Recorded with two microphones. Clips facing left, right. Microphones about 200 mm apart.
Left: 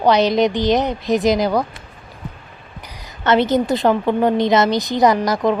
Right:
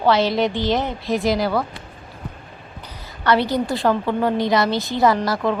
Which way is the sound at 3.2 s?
20° left (ahead or behind).